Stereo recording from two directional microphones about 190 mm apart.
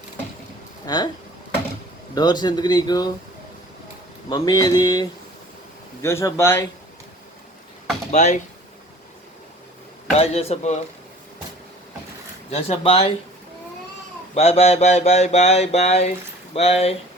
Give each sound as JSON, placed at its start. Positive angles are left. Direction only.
{"t": 0.9, "sound": "speech", "side_deg": 20}
{"t": 2.1, "sound": "speech", "side_deg": 20}
{"t": 4.3, "sound": "speech", "side_deg": 20}
{"t": 8.1, "sound": "mantra", "side_deg": 40}
{"t": 10.1, "sound": "mantra", "side_deg": 35}
{"t": 12.5, "sound": "mantra", "side_deg": 30}
{"t": 14.3, "sound": "mantra", "side_deg": 35}